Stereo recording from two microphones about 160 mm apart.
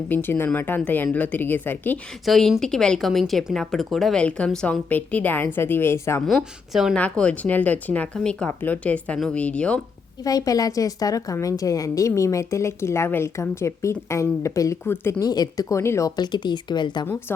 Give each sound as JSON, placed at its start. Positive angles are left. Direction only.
{"t": 0.1, "sound": "speech", "side_deg": 10}
{"t": 2.2, "sound": "speech", "side_deg": 0}
{"t": 6.2, "sound": "speech", "side_deg": 0}
{"t": 10.2, "sound": "a woman's voice", "side_deg": 20}